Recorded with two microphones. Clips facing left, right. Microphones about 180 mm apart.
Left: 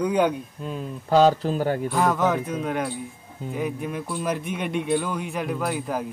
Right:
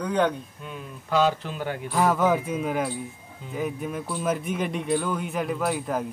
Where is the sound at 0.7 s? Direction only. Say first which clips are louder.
Left 6 dB; 35° left (ahead or behind).